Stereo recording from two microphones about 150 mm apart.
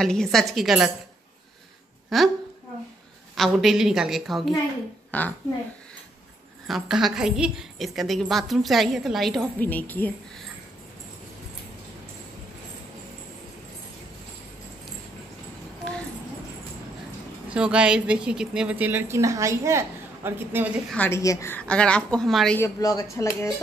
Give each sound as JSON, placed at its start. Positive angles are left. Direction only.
{"t": 0.0, "sound": "a woman's voice", "side_deg": 5}
{"t": 2.1, "sound": "a woman's voice", "side_deg": 0}
{"t": 3.3, "sound": "a woman's voice", "side_deg": 0}
{"t": 6.7, "sound": "a woman's voice", "side_deg": 0}
{"t": 9.6, "sound": "a woman's voice", "side_deg": 10}
{"t": 17.5, "sound": "a woman's voice", "side_deg": -5}
{"t": 20.9, "sound": "a woman's voice", "side_deg": 10}
{"t": 22.6, "sound": "speech", "side_deg": 25}